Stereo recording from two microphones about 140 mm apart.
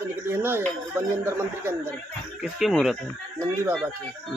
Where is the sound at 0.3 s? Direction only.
15° right (ahead or behind).